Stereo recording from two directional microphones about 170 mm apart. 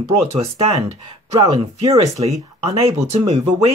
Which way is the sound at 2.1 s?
35° right (ahead or behind).